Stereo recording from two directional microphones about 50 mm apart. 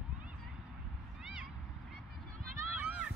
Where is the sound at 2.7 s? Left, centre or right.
Right.